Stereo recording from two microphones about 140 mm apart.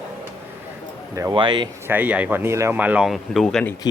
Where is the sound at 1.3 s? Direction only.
35° right (ahead or behind).